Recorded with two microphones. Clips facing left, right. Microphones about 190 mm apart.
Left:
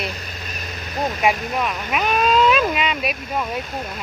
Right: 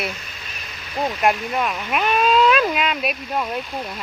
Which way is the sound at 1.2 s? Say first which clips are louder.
Right 1 dB; centre (ahead or behind).